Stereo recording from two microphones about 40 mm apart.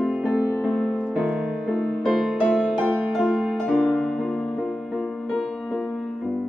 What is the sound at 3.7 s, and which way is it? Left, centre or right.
Music, centre.